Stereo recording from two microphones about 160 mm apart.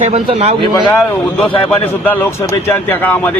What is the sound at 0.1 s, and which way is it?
Speech, 40° right (ahead or behind).